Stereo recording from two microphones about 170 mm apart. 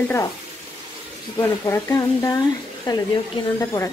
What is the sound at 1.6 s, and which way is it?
Stir, 20° left (ahead or behind).